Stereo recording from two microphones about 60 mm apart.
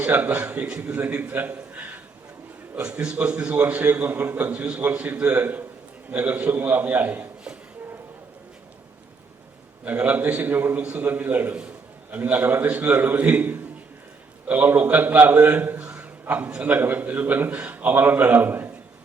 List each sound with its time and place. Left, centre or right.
0.0 s a man's voice: right
1.7 s a sound: right
2.8 s a man's voice: centre
9.8 s a man's voice: right
15.8 s a sound: centre
16.2 s a man's voice: right
16.5 s a man's voice: centre
16.7 s a man's voice: right